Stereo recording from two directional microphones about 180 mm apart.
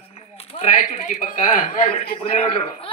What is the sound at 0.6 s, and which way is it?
Speech, 45° left (ahead or behind).